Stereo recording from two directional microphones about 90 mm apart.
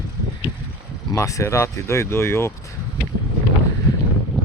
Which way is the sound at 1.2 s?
35° left (ahead or behind).